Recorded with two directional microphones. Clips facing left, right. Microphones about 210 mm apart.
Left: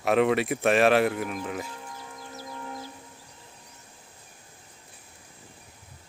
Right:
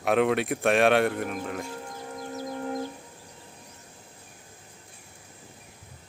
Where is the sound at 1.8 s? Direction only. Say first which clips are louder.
Right 5 dB; 40° right (ahead or behind).